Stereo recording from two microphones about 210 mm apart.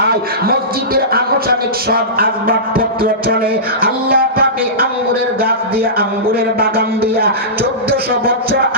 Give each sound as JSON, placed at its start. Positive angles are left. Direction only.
{"t": 0.9, "sound": "speech", "side_deg": -45}